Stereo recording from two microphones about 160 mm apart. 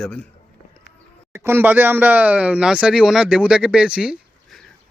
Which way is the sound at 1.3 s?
15° right (ahead or behind).